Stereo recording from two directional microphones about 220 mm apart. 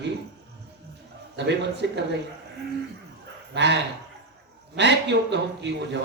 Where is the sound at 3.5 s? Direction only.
50° right (ahead or behind).